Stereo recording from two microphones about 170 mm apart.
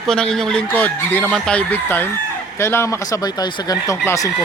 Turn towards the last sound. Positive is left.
turn(degrees=20)  # may be behind; listen again after turning